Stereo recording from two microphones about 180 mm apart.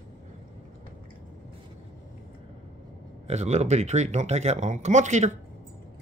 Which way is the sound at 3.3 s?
35° right (ahead or behind).